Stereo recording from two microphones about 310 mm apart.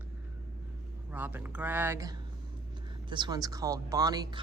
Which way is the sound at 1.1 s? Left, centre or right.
Centre.